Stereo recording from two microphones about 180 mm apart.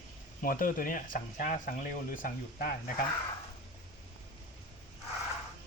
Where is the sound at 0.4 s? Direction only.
50° left (ahead or behind).